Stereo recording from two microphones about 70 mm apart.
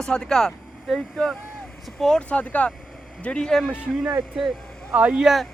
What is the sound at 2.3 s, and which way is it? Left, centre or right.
Speech, centre.